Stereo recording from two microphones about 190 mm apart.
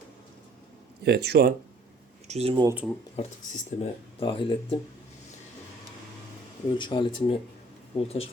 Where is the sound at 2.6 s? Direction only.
10° right (ahead or behind).